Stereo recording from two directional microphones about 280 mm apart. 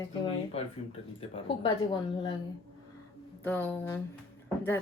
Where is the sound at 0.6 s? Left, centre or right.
Left.